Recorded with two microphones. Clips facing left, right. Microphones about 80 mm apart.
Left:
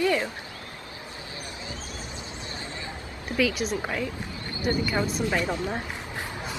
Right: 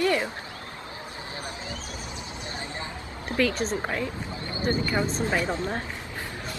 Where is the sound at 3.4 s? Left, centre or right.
Centre.